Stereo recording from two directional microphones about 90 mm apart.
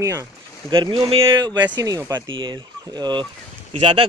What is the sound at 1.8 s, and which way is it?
Speech, 40° right (ahead or behind).